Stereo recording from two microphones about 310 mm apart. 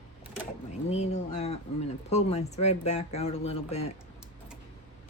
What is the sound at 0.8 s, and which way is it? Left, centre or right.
Speech, left.